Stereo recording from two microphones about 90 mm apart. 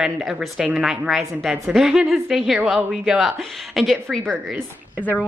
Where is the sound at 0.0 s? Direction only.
Centre (ahead or behind).